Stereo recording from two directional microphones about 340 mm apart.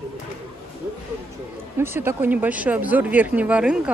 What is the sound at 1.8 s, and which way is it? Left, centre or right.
Speech, centre.